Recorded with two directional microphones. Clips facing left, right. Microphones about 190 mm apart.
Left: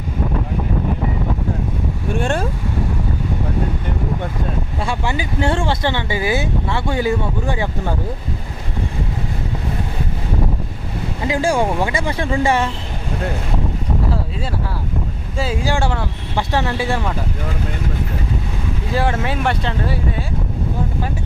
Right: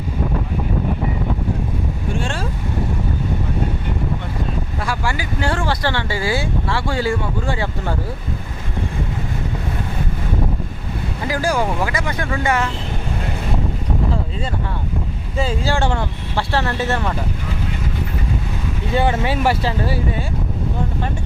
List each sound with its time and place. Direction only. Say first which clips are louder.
2.1 s speech: left 7 dB; 55° left (ahead or behind)
4.8 s speech: left 2 dB; 25° left (ahead or behind)
11.3 s speech: left 2 dB; 25° left (ahead or behind)
15.6 s speech: even; 15° left (ahead or behind)
18.9 s speech: right 2 dB; centre (ahead or behind)